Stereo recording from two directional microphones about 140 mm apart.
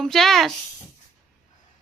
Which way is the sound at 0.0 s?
Centre (ahead or behind).